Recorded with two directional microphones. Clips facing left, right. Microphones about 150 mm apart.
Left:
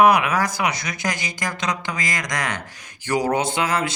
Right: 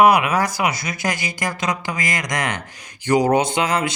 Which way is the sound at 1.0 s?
50° right (ahead or behind).